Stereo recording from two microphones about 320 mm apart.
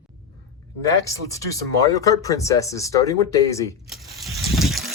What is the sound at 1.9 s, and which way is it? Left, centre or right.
Speech, centre.